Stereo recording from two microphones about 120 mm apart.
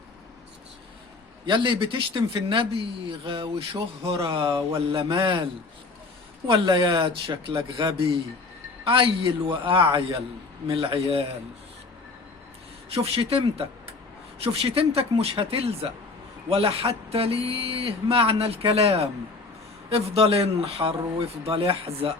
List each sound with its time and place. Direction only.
1.5 s speech: 40° right (ahead or behind)
4.4 s speech: 30° right (ahead or behind)
5.2 s speech: 45° right (ahead or behind)
6.5 s speech: 45° right (ahead or behind)
12.9 s speech: 55° right (ahead or behind)